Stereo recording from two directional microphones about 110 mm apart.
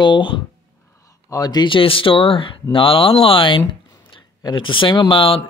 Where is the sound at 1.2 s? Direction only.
35° left (ahead or behind).